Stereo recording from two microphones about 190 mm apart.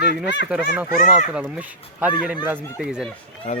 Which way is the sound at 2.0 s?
10° right (ahead or behind).